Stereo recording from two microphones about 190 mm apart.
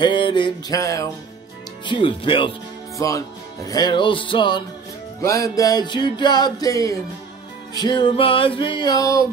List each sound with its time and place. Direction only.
0.0 s music: 25° left (ahead or behind)
3.6 s music: 20° left (ahead or behind)